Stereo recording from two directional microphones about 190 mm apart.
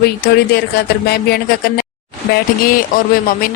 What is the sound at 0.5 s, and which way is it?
Speech, 55° left (ahead or behind).